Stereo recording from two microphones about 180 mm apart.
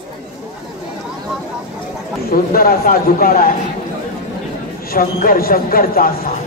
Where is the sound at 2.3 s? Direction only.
55° left (ahead or behind).